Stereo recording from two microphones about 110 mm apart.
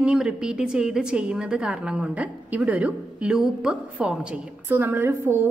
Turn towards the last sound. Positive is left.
turn(degrees=-20)  # may be behind; listen again after turning